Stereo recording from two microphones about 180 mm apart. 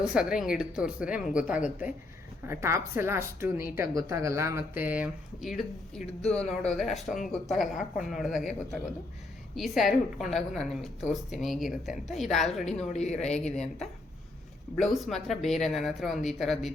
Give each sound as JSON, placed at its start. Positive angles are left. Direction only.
{"t": 0.1, "sound": "a woman's voice", "side_deg": -5}
{"t": 12.9, "sound": "a man's voice", "side_deg": 40}
{"t": 14.8, "sound": "speech", "side_deg": 0}